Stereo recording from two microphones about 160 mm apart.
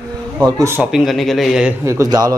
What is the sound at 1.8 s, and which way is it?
Speech, 15° right (ahead or behind).